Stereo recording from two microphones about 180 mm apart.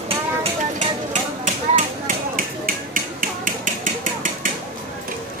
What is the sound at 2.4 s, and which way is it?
Music, 50° right (ahead or behind).